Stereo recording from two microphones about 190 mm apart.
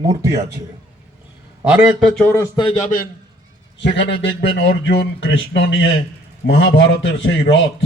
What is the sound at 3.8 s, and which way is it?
Speech, 65° left (ahead or behind).